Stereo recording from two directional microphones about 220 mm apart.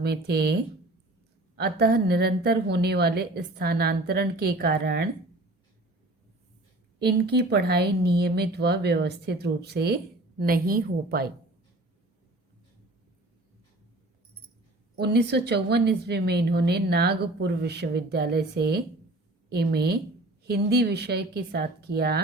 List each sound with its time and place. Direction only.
0.0 s speech: 45° right (ahead or behind)
1.5 s speech: 45° right (ahead or behind)
7.0 s speech: 50° right (ahead or behind)
14.9 s speech: 50° right (ahead or behind)